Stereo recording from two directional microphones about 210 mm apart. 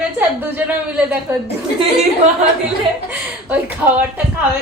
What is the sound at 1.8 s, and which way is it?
Speech, 30° right (ahead or behind).